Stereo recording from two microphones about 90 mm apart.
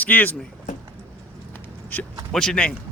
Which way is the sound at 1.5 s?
20° left (ahead or behind).